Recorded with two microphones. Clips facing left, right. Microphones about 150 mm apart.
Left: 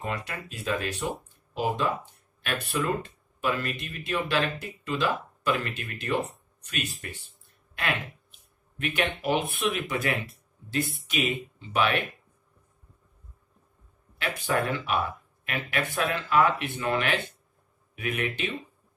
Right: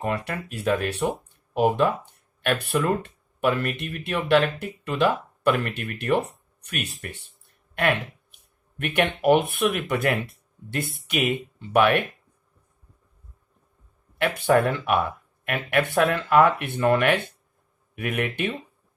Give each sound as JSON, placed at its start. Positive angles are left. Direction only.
{"t": 0.0, "sound": "speech", "side_deg": -60}
{"t": 8.7, "sound": "speech", "side_deg": -60}
{"t": 14.1, "sound": "speech", "side_deg": -60}